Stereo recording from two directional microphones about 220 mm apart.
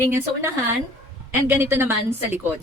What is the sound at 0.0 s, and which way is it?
A woman's voice, 10° right (ahead or behind).